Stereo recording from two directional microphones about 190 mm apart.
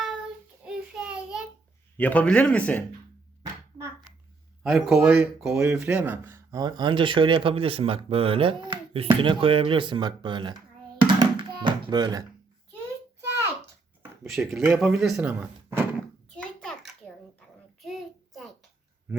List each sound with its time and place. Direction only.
0.6 s a sound: 5° right (ahead or behind)
2.0 s speech: 10° left (ahead or behind)
4.6 s speech: 5° right (ahead or behind); by 10.5 s 25° right (ahead or behind)
10.9 s music: 25° right (ahead or behind)
14.3 s speech: 5° right (ahead or behind)
16.3 s a sound: 5° left (ahead or behind)
17.8 s child singing: centre (ahead or behind)